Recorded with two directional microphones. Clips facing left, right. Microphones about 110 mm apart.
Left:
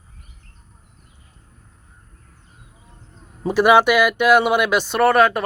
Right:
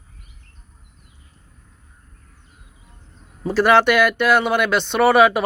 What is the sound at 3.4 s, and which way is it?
Speech, 15° left (ahead or behind).